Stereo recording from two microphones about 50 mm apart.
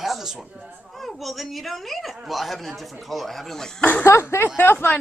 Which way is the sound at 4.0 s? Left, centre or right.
Left.